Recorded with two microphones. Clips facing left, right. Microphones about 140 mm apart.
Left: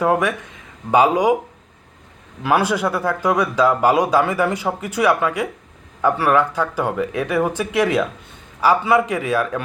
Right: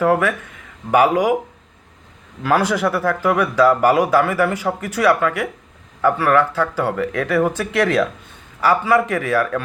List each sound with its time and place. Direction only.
0.0 s speech: 15° left (ahead or behind)
2.4 s a man's voice: 15° left (ahead or behind)